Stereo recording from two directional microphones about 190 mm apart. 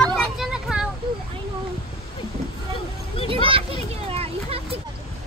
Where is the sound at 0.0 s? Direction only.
Centre (ahead or behind).